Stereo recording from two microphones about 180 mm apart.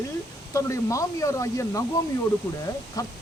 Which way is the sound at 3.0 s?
20° left (ahead or behind).